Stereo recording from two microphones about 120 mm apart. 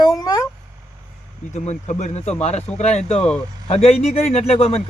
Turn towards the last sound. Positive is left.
turn(degrees=60)  # may be behind; listen again after turning